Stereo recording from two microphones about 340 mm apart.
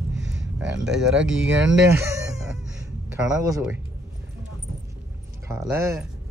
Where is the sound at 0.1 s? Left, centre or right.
Right.